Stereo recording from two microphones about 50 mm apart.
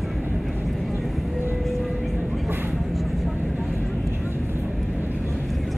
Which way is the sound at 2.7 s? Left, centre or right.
Centre.